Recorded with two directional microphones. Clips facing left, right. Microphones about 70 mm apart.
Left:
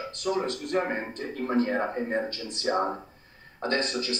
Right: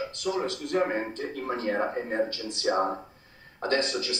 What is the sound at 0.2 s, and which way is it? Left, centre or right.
Speech, left.